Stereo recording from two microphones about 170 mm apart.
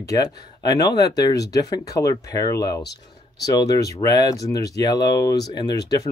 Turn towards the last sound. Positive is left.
turn(degrees=20)  # may be behind; listen again after turning